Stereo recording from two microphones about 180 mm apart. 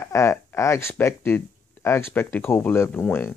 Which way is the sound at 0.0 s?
15° left (ahead or behind).